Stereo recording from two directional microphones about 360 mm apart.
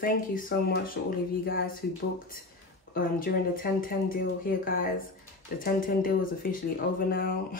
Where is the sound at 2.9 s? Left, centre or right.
Left.